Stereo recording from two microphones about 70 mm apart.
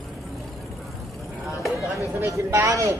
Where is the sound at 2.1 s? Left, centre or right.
Right.